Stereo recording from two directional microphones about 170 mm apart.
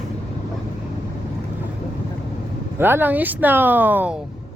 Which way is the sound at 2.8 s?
10° right (ahead or behind).